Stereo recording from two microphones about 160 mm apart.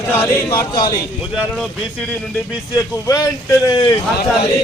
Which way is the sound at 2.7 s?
20° left (ahead or behind).